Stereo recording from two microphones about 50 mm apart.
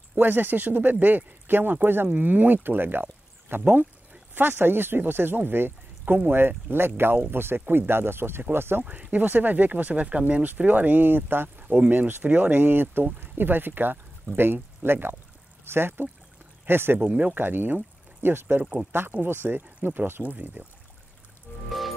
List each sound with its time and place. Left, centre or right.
0.1 s speech: right
8.8 s speech: right
11.6 s a sound: right
11.9 s speech: right
17.0 s speech: right
17.4 s speech: right
21.6 s music: centre